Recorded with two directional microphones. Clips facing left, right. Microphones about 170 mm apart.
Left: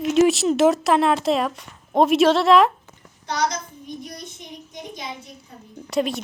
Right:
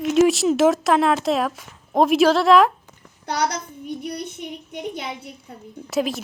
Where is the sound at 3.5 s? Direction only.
65° right (ahead or behind).